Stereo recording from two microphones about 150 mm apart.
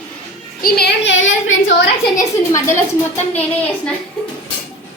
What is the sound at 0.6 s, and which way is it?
Music, 85° left.